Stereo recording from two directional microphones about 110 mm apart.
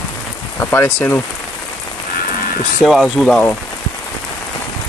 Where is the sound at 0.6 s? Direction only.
20° left (ahead or behind).